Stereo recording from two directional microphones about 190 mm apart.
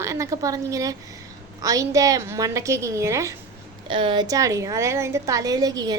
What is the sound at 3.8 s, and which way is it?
A woman's voice, 25° right (ahead or behind).